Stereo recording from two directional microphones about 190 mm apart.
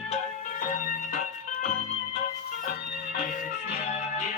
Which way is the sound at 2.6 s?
50° left (ahead or behind).